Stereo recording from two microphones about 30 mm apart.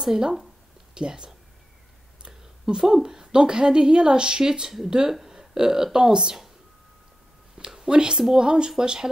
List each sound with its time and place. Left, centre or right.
0.0 s speech: centre
0.9 s a woman's voice: right
2.7 s a woman's voice: right
7.5 s a woman's voice: right